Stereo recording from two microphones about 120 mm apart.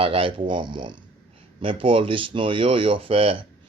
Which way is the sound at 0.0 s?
50° right (ahead or behind).